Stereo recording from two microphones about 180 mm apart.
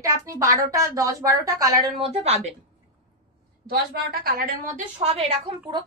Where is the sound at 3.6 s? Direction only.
60° right (ahead or behind).